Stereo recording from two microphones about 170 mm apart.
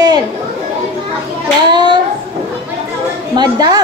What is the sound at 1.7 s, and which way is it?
Speech, 25° right (ahead or behind).